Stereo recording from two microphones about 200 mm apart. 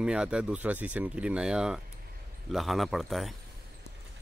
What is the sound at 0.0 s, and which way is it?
Speech, 5° right (ahead or behind).